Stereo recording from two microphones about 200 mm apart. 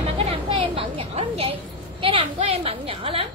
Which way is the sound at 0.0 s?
30° right (ahead or behind).